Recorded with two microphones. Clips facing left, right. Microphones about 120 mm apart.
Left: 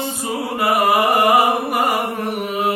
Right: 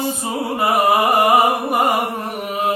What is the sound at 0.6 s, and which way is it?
Music, 20° right (ahead or behind).